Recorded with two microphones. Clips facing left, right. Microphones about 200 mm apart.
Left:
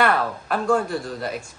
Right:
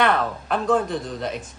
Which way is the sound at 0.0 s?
5° left (ahead or behind).